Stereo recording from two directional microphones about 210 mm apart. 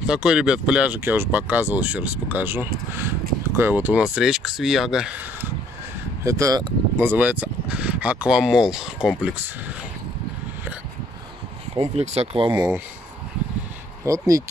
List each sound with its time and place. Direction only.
0.0 s speech: 5° right (ahead or behind)
6.2 s speech: 15° right (ahead or behind)
11.7 s speech: 25° right (ahead or behind)
14.0 s speech: 15° right (ahead or behind)